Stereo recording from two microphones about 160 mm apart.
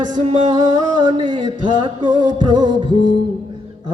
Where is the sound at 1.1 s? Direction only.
30° right (ahead or behind).